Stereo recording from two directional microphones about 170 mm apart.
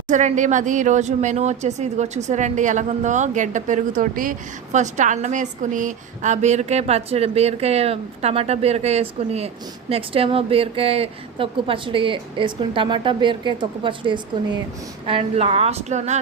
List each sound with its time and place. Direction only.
0.1 s speech: 45° right (ahead or behind)